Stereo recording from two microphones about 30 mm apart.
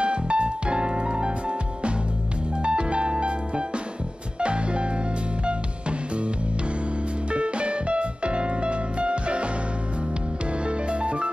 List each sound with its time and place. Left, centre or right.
0.0 s music: right
2.6 s music: right
10.6 s music: right